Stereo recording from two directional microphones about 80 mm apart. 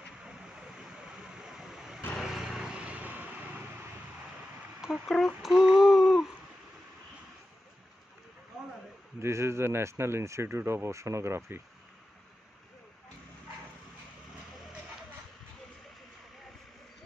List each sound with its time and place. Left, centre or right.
0.2 s vehicle: centre
5.0 s speech: centre
5.5 s a sound: centre
9.2 s speech: right